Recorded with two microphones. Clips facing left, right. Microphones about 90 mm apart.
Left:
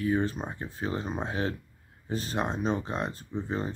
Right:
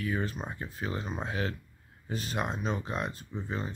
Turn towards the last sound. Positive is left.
turn(degrees=35)  # may be behind; listen again after turning